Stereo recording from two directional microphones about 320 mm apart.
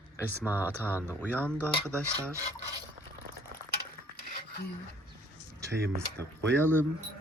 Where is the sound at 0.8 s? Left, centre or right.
Centre.